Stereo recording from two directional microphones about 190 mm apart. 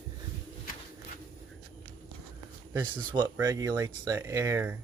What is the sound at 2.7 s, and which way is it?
Speech, 20° right (ahead or behind).